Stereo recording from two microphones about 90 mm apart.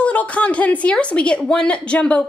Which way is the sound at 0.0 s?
15° left (ahead or behind).